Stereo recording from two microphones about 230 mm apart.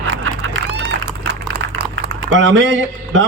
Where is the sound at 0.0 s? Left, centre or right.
Right.